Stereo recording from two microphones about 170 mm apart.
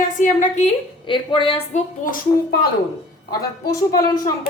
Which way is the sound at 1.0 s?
30° left (ahead or behind).